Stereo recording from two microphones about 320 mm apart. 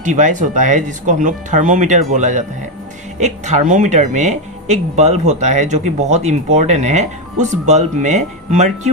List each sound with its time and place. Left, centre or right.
0.0 s speech: right